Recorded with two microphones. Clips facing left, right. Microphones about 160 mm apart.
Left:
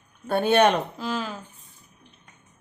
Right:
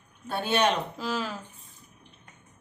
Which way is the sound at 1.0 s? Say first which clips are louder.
Left 2 dB; centre (ahead or behind).